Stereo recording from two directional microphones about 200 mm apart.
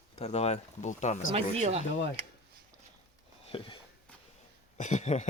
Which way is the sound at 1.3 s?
30° right (ahead or behind).